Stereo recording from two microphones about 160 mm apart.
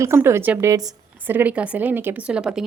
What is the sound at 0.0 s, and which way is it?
A woman's voice, 15° right (ahead or behind).